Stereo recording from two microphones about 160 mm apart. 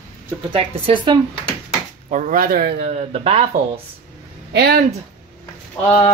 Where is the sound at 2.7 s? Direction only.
45° right (ahead or behind).